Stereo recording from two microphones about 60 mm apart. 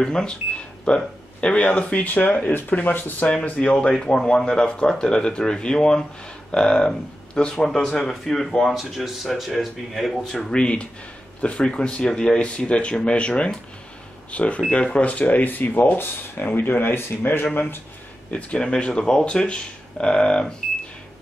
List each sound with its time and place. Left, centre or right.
0.0 s speech: centre
3.7 s speech: centre
10.3 s speech: centre; by 17.8 s left
18.3 s speech: centre